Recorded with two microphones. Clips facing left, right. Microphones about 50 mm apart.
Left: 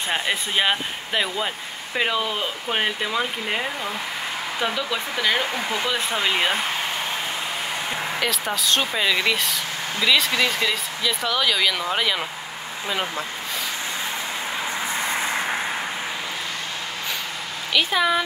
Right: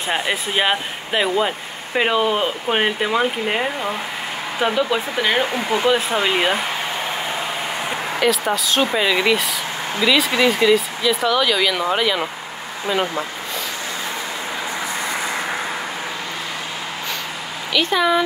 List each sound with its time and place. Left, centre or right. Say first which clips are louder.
0.1 s speech: right 3 dB; centre; by 5.9 s right
6.0 s speech: right 4 dB; centre
8.2 s speech: right 9 dB; centre
17.7 s speech: right 3 dB; centre